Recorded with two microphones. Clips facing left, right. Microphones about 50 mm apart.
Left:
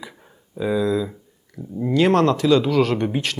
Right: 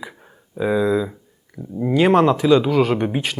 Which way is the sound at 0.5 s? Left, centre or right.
Centre.